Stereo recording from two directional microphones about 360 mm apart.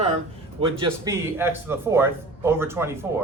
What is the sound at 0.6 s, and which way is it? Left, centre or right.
Speech, centre.